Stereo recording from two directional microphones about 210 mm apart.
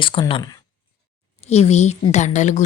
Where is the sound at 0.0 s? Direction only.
25° left (ahead or behind).